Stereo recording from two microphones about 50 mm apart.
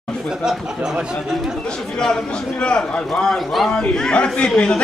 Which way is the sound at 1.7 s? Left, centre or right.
Centre.